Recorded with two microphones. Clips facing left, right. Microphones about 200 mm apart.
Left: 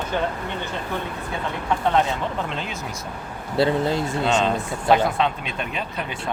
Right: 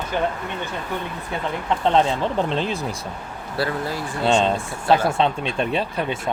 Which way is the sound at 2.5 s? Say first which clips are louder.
Right 7 dB; 35° right (ahead or behind).